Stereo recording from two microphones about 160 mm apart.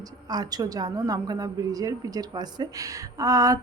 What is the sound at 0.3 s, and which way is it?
A woman's voice, 25° right (ahead or behind).